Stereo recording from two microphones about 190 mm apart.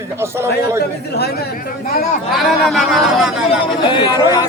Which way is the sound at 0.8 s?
55° left (ahead or behind).